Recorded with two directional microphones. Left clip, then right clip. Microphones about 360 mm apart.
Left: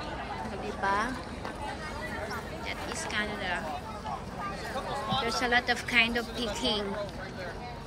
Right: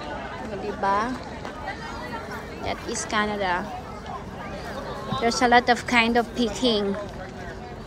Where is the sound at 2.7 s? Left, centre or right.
Centre.